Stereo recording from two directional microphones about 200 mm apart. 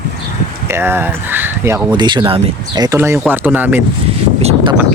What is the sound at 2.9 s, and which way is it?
Speech, 10° right (ahead or behind).